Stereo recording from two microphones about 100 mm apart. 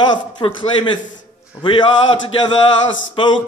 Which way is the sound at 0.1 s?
55° left (ahead or behind).